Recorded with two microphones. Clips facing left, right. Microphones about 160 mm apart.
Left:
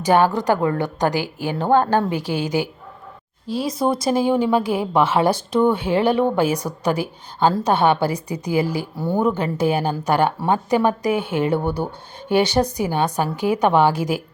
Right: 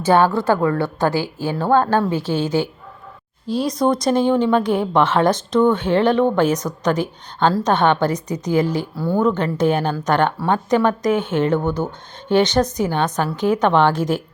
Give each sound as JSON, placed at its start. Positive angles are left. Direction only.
{"t": 0.0, "sound": "a woman's voice", "side_deg": 15}